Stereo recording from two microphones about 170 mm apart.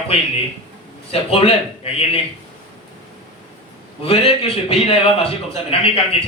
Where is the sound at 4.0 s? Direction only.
35° left (ahead or behind).